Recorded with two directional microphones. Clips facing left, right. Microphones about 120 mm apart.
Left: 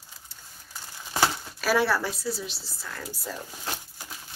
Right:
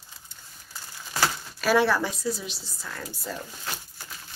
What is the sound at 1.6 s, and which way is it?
Speech, 5° left (ahead or behind).